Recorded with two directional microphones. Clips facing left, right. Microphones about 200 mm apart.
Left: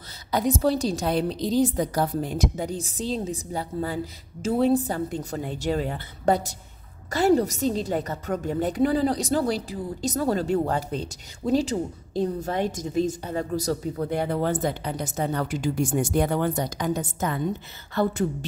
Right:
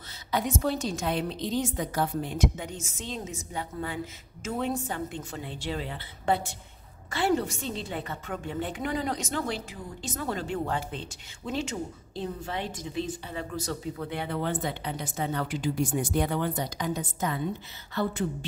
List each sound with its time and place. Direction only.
0.3 s a woman's voice: 35° left (ahead or behind)